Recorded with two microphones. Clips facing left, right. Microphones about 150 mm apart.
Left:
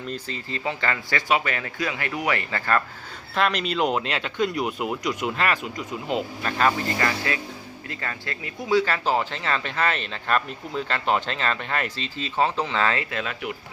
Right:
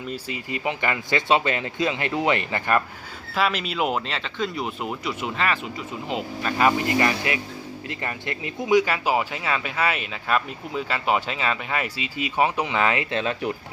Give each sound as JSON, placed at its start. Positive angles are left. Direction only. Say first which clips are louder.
{"t": 0.1, "sound": "speech", "louder": "right 2 dB", "side_deg": -10}
{"t": 3.3, "sound": "speech", "louder": "left 1 dB", "side_deg": -5}
{"t": 6.7, "sound": "speech", "louder": "right 4 dB", "side_deg": -20}